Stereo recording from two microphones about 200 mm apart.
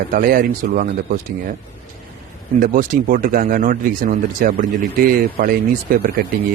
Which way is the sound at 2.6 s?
40° right (ahead or behind).